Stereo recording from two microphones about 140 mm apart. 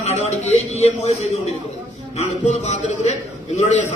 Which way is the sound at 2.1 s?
55° left (ahead or behind).